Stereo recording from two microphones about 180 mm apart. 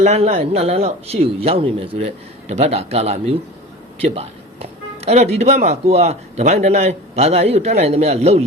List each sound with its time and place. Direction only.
0.0 s speech: 35° right (ahead or behind)